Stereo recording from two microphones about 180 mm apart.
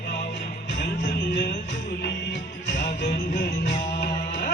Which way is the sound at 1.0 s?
70° left (ahead or behind).